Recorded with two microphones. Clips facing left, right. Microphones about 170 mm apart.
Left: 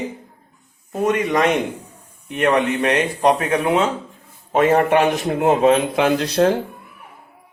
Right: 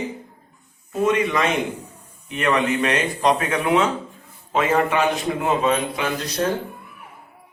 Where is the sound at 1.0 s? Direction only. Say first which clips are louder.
Left 2 dB; 45° left (ahead or behind).